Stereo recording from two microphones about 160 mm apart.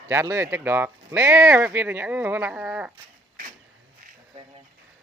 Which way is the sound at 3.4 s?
60° right (ahead or behind).